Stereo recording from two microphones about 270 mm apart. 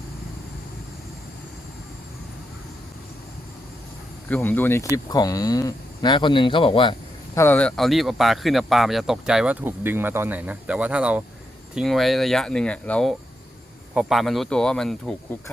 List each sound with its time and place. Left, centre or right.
4.3 s speech: centre
7.3 s speech: centre